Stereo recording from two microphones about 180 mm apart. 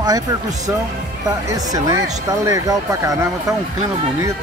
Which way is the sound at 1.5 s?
20° right (ahead or behind).